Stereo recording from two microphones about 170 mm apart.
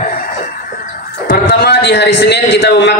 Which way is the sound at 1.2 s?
60° left (ahead or behind).